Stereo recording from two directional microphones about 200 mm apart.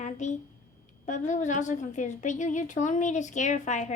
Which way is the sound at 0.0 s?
35° left (ahead or behind).